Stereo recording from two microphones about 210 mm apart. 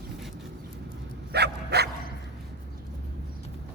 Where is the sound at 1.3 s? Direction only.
50° right (ahead or behind).